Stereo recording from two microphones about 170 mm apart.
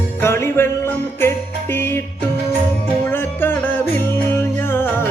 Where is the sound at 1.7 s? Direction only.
15° left (ahead or behind).